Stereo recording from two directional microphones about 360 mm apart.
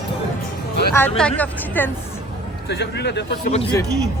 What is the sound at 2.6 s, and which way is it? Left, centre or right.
Speech, left.